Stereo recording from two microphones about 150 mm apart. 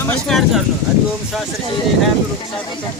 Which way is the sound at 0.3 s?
Centre (ahead or behind).